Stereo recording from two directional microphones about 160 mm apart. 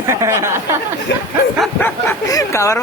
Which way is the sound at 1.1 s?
90° left.